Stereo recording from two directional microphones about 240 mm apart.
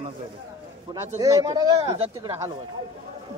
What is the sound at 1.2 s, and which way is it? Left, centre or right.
Speech, centre.